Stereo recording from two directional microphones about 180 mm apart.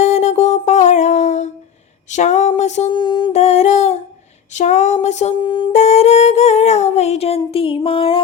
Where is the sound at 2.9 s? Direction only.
25° left (ahead or behind).